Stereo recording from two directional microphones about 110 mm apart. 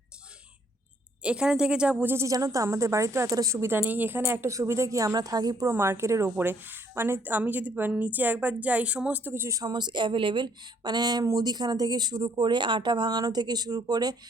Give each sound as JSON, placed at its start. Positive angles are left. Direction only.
{"t": 1.2, "sound": "speech", "side_deg": -10}
{"t": 2.1, "sound": "a woman's voice", "side_deg": -30}
{"t": 5.7, "sound": "a woman's voice", "side_deg": -20}